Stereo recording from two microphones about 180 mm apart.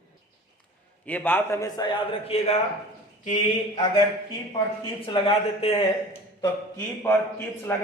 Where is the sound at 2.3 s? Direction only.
35° left (ahead or behind).